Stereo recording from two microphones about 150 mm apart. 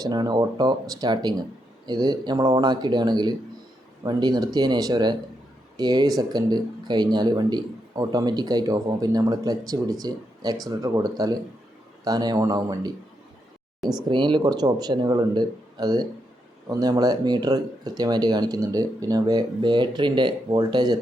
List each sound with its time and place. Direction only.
0.0 s speech: 25° right (ahead or behind)
14.1 s speech: 30° right (ahead or behind)